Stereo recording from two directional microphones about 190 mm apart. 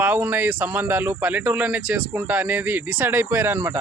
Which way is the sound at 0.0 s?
10° right (ahead or behind).